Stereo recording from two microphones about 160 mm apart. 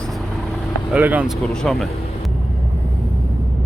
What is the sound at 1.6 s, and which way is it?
Speech, centre (ahead or behind).